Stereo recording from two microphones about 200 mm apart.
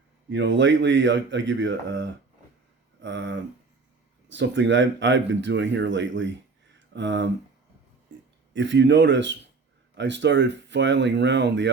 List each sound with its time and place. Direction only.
0.3 s speech: 65° right (ahead or behind)
6.7 s a sound: 65° right (ahead or behind)
8.5 s speech: 65° right (ahead or behind)